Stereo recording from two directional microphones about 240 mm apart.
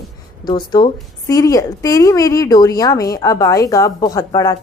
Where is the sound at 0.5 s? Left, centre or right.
Centre.